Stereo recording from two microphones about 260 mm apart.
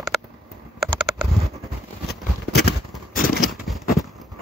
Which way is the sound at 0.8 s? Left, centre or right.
Centre.